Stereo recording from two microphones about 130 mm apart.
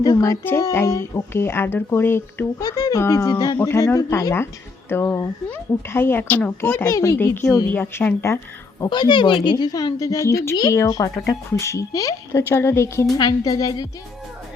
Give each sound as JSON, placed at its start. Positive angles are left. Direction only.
{"t": 0.0, "sound": "speech", "side_deg": 30}
{"t": 3.3, "sound": "a woman's voice", "side_deg": 40}
{"t": 3.6, "sound": "speech", "side_deg": 20}
{"t": 8.8, "sound": "a woman's voice", "side_deg": 35}